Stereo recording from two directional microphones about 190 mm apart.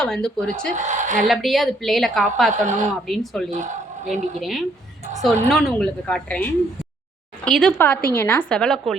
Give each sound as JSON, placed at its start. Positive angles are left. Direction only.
{"t": 0.0, "sound": "a woman's voice", "side_deg": 5}
{"t": 0.8, "sound": "a woman's voice", "side_deg": -40}
{"t": 1.3, "sound": "a woman's voice", "side_deg": 0}
{"t": 2.5, "sound": "speech", "side_deg": -40}
{"t": 3.1, "sound": "a woman's voice", "side_deg": 0}
{"t": 3.5, "sound": "speech", "side_deg": -40}
{"t": 4.4, "sound": "a woman's voice", "side_deg": 0}